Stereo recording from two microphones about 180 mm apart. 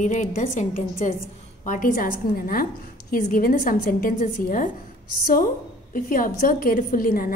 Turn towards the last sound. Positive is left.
turn(degrees=50)  # may be behind; listen again after turning